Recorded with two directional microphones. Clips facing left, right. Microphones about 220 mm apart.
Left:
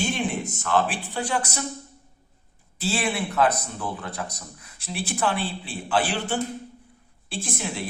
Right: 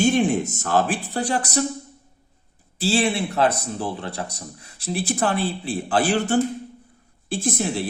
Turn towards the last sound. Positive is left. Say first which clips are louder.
# right 6 dB
turn(degrees=-40)  # may be behind; listen again after turning